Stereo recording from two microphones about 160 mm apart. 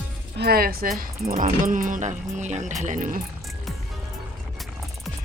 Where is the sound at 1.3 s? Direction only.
55° right (ahead or behind).